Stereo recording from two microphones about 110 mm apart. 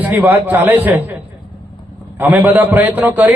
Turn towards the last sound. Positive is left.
turn(degrees=-15)  # may be behind; listen again after turning